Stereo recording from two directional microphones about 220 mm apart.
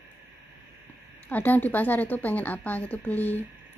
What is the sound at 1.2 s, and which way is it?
A woman's voice, 5° left (ahead or behind).